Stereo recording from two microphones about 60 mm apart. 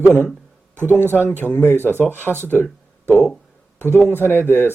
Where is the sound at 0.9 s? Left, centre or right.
Left.